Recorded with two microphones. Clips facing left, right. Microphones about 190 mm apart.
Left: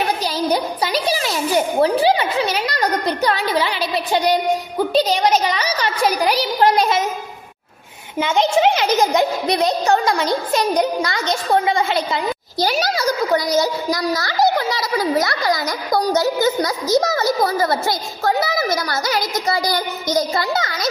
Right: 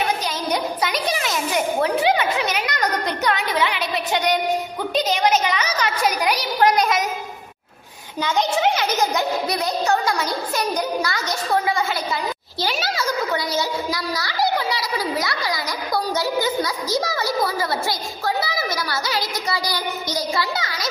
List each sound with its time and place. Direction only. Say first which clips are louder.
0.4 s a child's voice: left 4 dB; 30° left (ahead or behind)
8.2 s a child's voice: left 4 dB; 25° left (ahead or behind)
12.5 s a sound: left 6 dB; 40° left (ahead or behind)
17.0 s a child's voice: left 4 dB; 45° left (ahead or behind)